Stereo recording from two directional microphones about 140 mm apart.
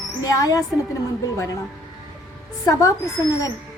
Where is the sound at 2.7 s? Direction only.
25° left (ahead or behind).